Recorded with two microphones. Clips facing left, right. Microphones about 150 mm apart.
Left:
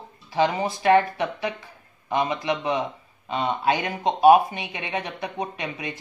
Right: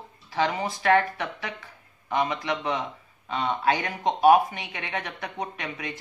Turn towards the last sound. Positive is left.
turn(degrees=20)  # may be behind; listen again after turning